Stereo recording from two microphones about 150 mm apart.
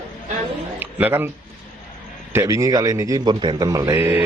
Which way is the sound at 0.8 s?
15° right (ahead or behind).